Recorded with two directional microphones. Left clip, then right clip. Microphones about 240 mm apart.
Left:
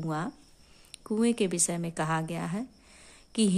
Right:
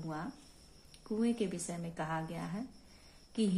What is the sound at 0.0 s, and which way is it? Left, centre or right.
Speech, left.